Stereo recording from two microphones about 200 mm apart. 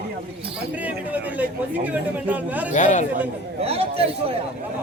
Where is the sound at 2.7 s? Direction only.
40° left (ahead or behind).